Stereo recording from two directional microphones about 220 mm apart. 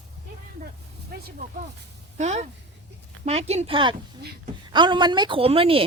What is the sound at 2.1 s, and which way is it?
A woman's voice, 30° right (ahead or behind).